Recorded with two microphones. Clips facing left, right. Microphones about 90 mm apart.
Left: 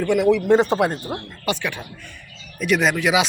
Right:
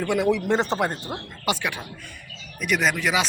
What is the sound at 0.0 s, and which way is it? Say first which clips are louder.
Speech: left 5 dB; 15° right (ahead or behind).